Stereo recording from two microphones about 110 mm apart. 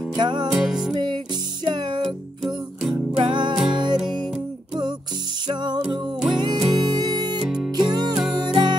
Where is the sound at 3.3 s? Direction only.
45° right (ahead or behind).